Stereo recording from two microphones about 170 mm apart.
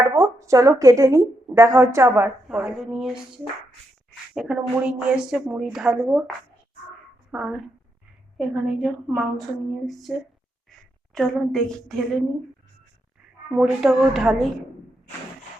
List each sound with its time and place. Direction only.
0.1 s a woman's voice: 20° right (ahead or behind)
2.1 s a woman's voice: 5° right (ahead or behind)
7.3 s a woman's voice: 5° right (ahead or behind)
13.6 s a woman's voice: centre (ahead or behind)